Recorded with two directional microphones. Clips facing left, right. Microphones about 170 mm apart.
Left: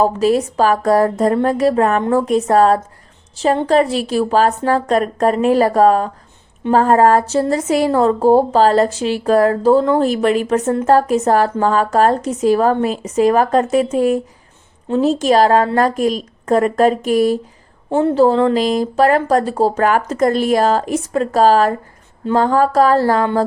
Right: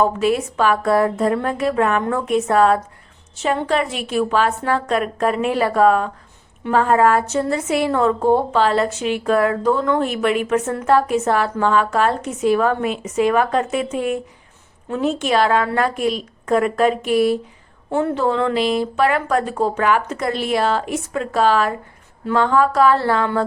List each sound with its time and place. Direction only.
0.0 s a woman's voice: 35° left (ahead or behind)